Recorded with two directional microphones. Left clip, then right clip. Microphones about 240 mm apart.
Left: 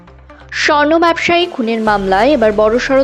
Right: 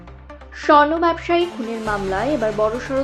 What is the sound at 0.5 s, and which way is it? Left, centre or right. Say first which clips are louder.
Speech: left 3 dB; left.